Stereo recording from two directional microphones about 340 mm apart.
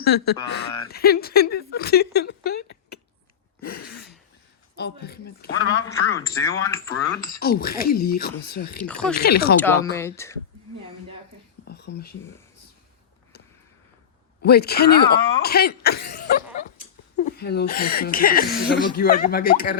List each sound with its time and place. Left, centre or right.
0.0 s speech: left
3.7 s a sound: left
4.8 s speech: left
5.8 s speech: centre
7.3 s speech: left
8.8 s speech: centre
9.1 s speech: left
9.6 s speech: centre
11.7 s speech: left
14.4 s speech: left